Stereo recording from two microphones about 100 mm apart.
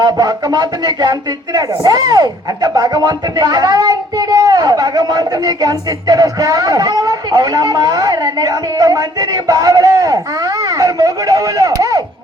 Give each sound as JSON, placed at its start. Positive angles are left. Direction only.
{"t": 0.0, "sound": "speech", "side_deg": -45}